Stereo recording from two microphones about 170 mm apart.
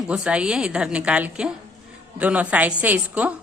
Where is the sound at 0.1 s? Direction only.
5° right (ahead or behind).